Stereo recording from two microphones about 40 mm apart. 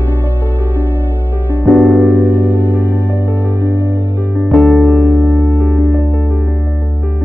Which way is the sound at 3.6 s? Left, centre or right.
Right.